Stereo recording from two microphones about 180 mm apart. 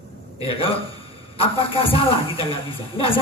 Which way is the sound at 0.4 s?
30° left (ahead or behind).